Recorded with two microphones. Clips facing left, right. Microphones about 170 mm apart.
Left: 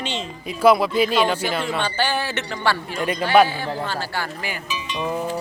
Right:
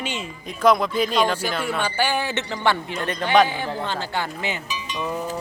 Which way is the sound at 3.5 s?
20° right (ahead or behind).